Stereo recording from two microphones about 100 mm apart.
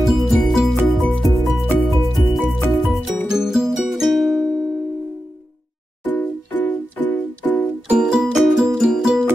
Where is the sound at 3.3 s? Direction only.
5° right (ahead or behind).